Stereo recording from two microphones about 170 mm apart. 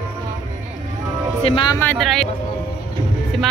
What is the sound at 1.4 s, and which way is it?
Speech, 30° left (ahead or behind).